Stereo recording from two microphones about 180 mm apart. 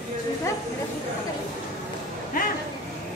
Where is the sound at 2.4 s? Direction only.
50° left (ahead or behind).